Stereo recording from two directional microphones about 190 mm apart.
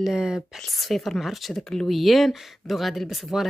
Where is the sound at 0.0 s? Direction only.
5° right (ahead or behind).